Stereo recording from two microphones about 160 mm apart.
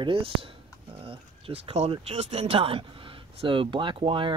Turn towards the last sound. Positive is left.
turn(degrees=-30)  # may be behind; listen again after turning